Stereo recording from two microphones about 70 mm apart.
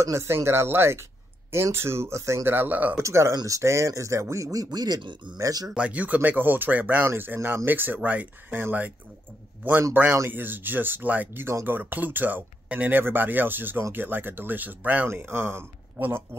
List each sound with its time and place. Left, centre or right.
0.0 s speech: right
3.0 s speech: right
5.4 s speech: right
5.8 s speech: right
10.0 s speech: right